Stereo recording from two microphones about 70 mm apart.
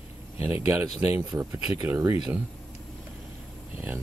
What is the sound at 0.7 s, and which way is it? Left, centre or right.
Speech, right.